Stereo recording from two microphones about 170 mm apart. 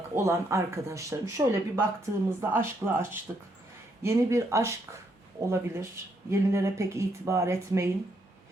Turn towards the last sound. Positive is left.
turn(degrees=-15)  # may be behind; listen again after turning